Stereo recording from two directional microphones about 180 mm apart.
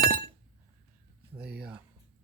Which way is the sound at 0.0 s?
55° right (ahead or behind).